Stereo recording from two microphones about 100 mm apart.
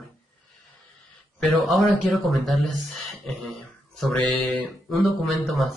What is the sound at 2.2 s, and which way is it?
Speech, centre (ahead or behind).